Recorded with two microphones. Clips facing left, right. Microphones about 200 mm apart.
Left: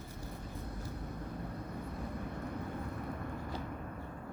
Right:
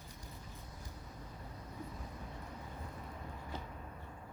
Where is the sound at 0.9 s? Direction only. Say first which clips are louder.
Left 9 dB; 60° left (ahead or behind).